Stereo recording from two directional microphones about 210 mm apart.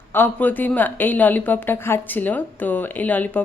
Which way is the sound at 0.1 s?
10° left (ahead or behind).